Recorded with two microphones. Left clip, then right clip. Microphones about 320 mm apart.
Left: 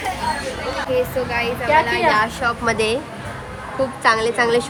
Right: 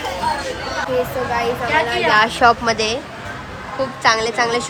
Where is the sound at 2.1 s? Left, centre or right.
Right.